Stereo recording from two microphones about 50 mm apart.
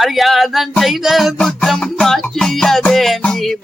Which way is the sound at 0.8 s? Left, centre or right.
Centre.